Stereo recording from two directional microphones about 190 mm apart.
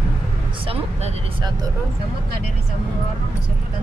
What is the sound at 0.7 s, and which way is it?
Speech, 25° right (ahead or behind).